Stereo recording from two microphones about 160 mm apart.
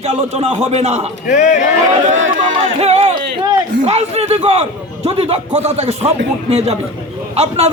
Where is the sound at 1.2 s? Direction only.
50° left (ahead or behind).